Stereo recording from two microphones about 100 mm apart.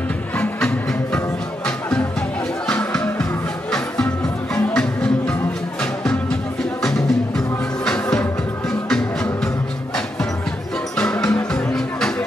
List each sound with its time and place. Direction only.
0.4 s music: 10° left (ahead or behind)
2.7 s music: 10° left (ahead or behind)
6.8 s music: 5° left (ahead or behind)
11.0 s music: 10° left (ahead or behind)